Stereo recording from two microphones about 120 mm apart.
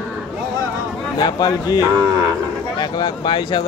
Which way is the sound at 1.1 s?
35° left (ahead or behind).